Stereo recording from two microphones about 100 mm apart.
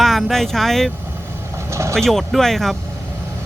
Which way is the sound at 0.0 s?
Centre (ahead or behind).